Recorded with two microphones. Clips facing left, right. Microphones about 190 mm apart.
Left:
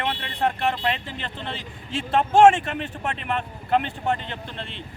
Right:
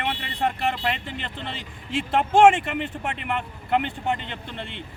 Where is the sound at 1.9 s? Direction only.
15° right (ahead or behind).